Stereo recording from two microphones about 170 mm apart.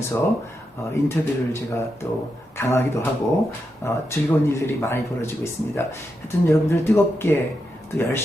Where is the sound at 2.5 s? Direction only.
15° left (ahead or behind).